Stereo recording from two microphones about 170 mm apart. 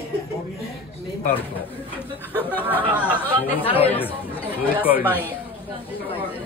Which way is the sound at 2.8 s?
5° right (ahead or behind).